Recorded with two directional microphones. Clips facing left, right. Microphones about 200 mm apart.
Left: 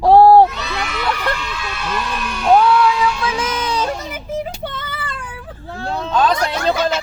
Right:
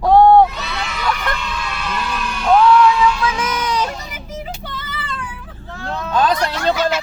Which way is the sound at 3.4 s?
30° left (ahead or behind).